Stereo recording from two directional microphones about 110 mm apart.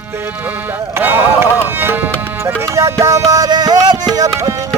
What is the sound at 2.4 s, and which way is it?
Music, 25° right (ahead or behind).